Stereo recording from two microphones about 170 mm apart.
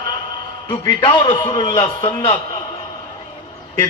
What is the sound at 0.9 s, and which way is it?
A man's voice, 30° left (ahead or behind).